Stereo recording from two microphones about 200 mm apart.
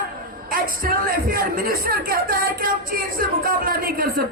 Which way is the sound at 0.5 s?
45° right (ahead or behind).